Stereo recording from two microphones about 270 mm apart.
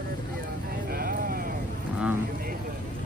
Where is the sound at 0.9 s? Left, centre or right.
Right.